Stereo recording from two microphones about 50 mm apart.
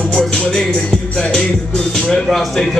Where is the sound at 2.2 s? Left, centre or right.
Centre.